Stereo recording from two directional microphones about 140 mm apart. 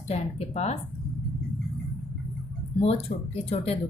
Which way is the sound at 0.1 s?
50° left (ahead or behind).